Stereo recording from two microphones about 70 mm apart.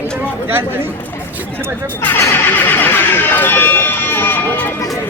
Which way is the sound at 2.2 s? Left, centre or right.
Left.